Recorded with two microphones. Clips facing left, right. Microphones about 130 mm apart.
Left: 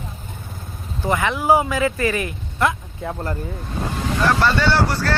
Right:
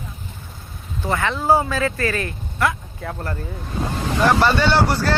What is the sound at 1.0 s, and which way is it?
Speech, 15° left (ahead or behind).